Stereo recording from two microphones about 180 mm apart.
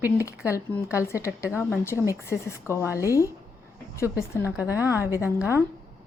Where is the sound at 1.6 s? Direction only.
10° left (ahead or behind).